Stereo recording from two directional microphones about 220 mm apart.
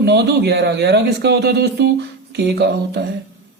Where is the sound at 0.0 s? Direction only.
50° right (ahead or behind).